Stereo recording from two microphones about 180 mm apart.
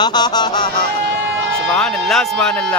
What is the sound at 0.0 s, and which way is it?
Music, 25° left (ahead or behind).